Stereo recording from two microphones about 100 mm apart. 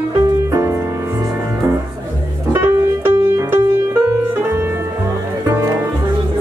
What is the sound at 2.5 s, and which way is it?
Music, 20° right (ahead or behind).